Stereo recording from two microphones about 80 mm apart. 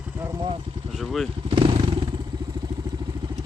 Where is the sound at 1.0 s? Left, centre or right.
Centre.